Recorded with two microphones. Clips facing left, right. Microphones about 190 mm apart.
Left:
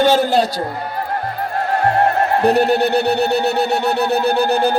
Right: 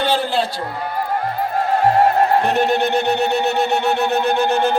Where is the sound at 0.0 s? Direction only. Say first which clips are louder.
Left 5 dB; 45° left (ahead or behind).